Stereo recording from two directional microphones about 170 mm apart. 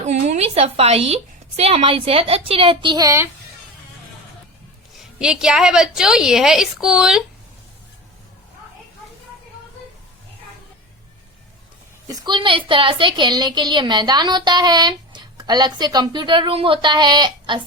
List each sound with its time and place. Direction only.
0.0 s a woman's voice: 45° right (ahead or behind); by 3.2 s 20° right (ahead or behind)
5.2 s a woman's voice: 5° right (ahead or behind)
12.0 s a woman's voice: 25° right (ahead or behind)